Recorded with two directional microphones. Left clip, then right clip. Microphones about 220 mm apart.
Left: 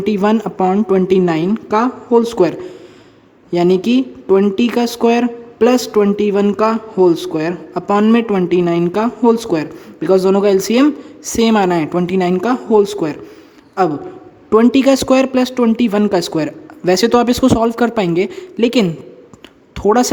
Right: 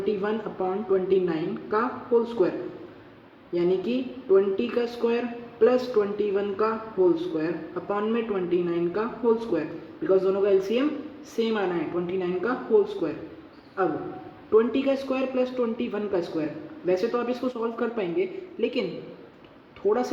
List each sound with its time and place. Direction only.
0.0 s speech: 50° left (ahead or behind)
3.5 s speech: 45° left (ahead or behind)
14.5 s speech: 50° left (ahead or behind)